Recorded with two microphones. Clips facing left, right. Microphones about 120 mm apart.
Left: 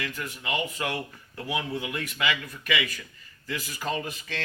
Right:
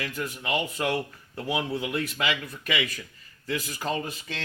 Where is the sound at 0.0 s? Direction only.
30° right (ahead or behind).